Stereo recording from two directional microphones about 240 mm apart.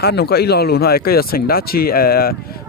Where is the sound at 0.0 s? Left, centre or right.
Left.